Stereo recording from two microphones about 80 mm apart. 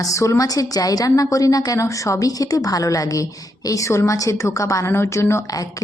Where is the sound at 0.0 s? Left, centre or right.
Left.